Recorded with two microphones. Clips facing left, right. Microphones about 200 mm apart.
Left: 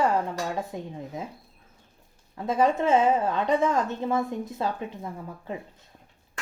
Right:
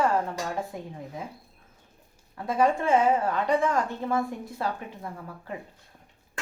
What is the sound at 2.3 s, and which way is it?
A woman's voice, 20° left (ahead or behind).